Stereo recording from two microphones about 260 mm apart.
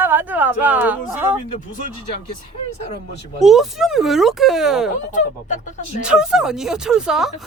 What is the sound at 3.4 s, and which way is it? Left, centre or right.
Speech, centre.